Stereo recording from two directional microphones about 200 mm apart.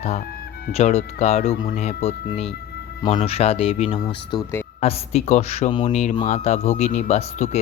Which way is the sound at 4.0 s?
20° left (ahead or behind).